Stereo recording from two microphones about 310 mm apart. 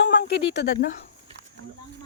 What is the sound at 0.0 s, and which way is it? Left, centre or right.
Speech, left.